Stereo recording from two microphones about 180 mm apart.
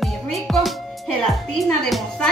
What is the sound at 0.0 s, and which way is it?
Speech, centre (ahead or behind).